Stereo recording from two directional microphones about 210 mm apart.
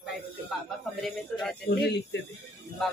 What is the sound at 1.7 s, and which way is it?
Speech, 50° left (ahead or behind).